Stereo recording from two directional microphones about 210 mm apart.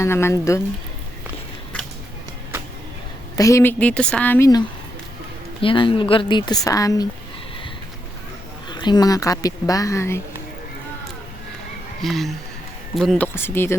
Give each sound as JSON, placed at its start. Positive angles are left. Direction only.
{"t": 0.0, "sound": "speech", "side_deg": 10}
{"t": 3.3, "sound": "a woman's voice", "side_deg": 15}
{"t": 8.7, "sound": "speech", "side_deg": 20}
{"t": 12.0, "sound": "speech", "side_deg": 0}